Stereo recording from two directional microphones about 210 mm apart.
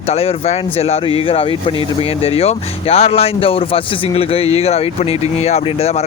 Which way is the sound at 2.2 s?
30° left (ahead or behind).